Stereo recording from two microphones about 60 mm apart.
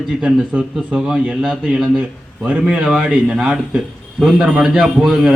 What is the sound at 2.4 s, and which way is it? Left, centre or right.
A man's voice, centre.